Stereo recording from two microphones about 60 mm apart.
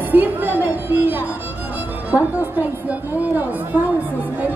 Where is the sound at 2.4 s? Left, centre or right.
Right.